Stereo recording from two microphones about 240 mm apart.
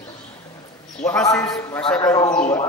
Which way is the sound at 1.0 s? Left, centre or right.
Centre.